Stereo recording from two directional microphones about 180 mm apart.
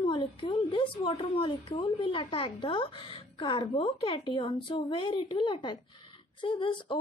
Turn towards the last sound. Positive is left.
turn(degrees=30)  # may be behind; listen again after turning